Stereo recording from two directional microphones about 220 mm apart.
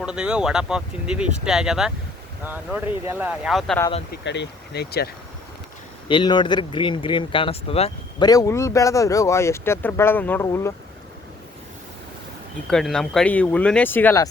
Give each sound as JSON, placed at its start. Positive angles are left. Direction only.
{"t": 0.0, "sound": "speech", "side_deg": -5}
{"t": 4.1, "sound": "speech", "side_deg": 50}
{"t": 6.1, "sound": "speech", "side_deg": 20}
{"t": 12.7, "sound": "speech", "side_deg": 0}